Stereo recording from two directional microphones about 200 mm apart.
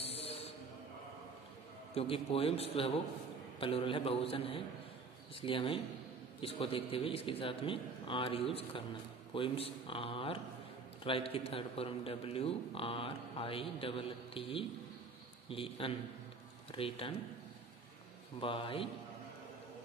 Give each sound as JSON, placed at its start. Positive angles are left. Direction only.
{"t": 0.0, "sound": "a sound", "side_deg": 30}
{"t": 2.0, "sound": "a man's voice", "side_deg": 30}
{"t": 18.4, "sound": "a man's voice", "side_deg": 25}